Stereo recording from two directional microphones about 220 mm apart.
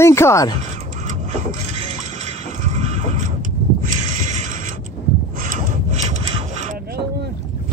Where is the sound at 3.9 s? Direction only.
35° right (ahead or behind).